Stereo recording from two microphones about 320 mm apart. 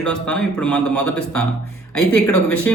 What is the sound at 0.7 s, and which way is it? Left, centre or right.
Speech, left.